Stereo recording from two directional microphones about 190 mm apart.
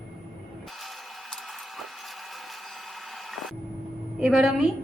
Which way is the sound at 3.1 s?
Centre (ahead or behind).